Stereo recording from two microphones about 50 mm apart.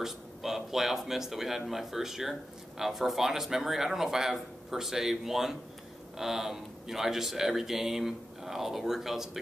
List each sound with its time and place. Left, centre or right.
0.0 s speech: centre